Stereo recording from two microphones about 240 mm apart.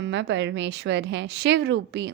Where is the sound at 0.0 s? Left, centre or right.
Right.